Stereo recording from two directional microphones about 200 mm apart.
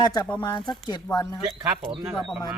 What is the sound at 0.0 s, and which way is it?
Speech, 20° left (ahead or behind).